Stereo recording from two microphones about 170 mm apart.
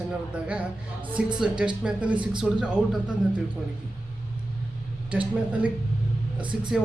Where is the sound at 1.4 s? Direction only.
5° right (ahead or behind).